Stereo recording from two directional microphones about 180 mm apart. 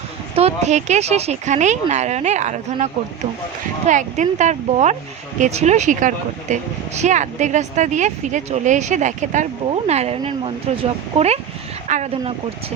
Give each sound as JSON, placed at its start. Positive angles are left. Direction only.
{"t": 0.3, "sound": "speech", "side_deg": -35}
{"t": 11.9, "sound": "speech", "side_deg": -40}